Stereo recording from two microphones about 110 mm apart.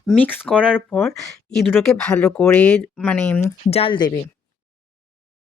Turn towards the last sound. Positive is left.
turn(degrees=60)  # may be behind; listen again after turning